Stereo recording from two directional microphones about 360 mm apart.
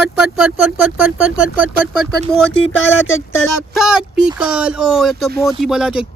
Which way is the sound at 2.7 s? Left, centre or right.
Left.